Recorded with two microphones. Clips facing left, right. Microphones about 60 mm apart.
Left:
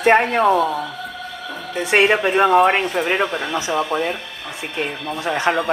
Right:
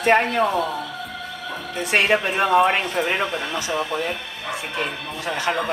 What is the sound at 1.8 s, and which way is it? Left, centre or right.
Speech, left.